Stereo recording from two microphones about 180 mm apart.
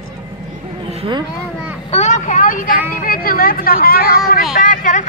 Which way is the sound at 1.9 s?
40° left (ahead or behind).